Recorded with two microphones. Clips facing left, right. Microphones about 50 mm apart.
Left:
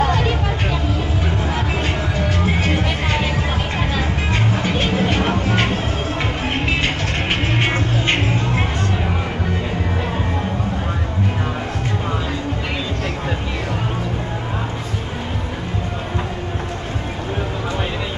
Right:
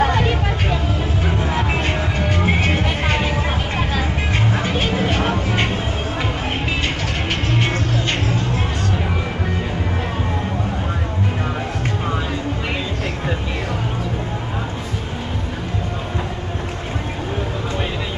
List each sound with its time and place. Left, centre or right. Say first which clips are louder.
0.0 s vehicle: right 1 dB; centre
2.6 s music: even; centre
4.6 s music: left 1 dB; centre
7.5 s music: left 1 dB; left